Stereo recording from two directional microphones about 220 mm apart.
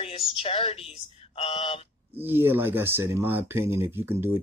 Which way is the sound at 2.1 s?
10° right (ahead or behind).